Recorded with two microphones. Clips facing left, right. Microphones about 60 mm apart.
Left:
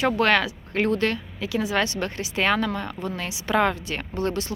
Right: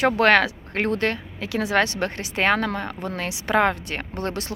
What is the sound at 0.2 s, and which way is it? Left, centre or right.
Speech, right.